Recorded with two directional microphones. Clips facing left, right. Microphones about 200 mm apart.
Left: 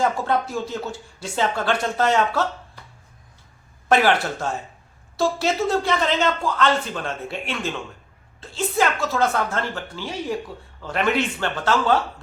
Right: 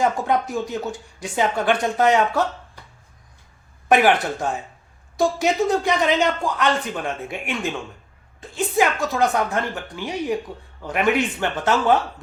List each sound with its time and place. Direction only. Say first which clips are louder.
0.0 s a woman's voice: right 1 dB; 15° right (ahead or behind)
3.8 s a woman's voice: right 2 dB; 15° right (ahead or behind)